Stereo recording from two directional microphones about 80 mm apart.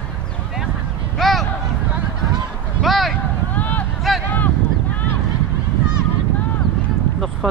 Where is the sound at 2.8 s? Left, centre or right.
Centre.